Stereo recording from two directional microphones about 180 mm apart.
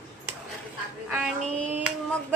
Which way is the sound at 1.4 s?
40° right (ahead or behind).